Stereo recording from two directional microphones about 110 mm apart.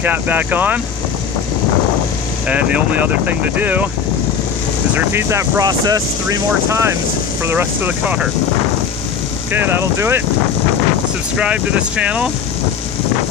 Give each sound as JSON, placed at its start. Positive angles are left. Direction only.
{"t": 0.0, "sound": "speech", "side_deg": -15}
{"t": 2.5, "sound": "speech", "side_deg": -10}
{"t": 4.9, "sound": "speech", "side_deg": -20}
{"t": 5.6, "sound": "speech", "side_deg": -35}
{"t": 9.5, "sound": "speech", "side_deg": -20}
{"t": 11.3, "sound": "speech", "side_deg": -10}